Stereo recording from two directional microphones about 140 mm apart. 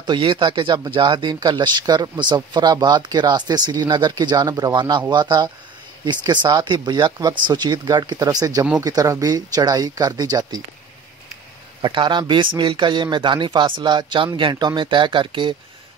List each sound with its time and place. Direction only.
0.0 s speech: 35° right (ahead or behind)
11.8 s speech: 35° right (ahead or behind)